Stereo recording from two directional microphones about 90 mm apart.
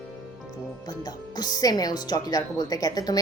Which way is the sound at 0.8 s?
45° left (ahead or behind).